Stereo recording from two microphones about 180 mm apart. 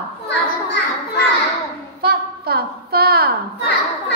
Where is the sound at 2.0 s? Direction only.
60° right (ahead or behind).